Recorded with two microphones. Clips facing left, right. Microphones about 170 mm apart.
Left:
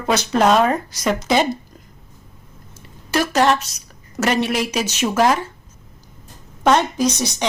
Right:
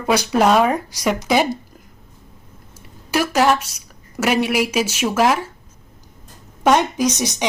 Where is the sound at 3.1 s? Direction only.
10° right (ahead or behind).